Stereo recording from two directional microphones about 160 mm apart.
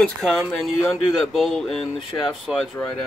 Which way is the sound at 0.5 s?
Centre (ahead or behind).